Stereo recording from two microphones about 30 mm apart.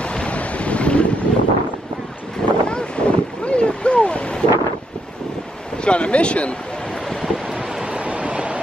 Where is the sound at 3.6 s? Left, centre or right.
Left.